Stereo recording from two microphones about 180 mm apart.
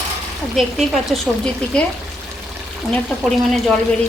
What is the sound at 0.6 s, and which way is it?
A woman's voice, centre (ahead or behind).